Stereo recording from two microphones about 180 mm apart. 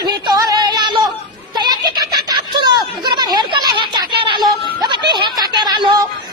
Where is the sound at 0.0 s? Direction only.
20° right (ahead or behind).